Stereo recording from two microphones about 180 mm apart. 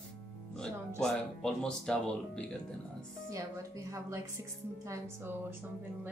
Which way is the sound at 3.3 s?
15° right (ahead or behind).